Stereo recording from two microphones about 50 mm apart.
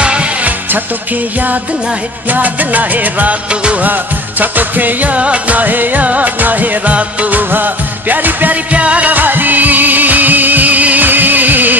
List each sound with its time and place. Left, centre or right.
0.0 s music: right
2.2 s music: right
8.7 s music: right